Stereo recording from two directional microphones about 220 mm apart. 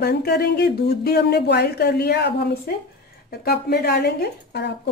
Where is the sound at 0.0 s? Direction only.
45° left (ahead or behind).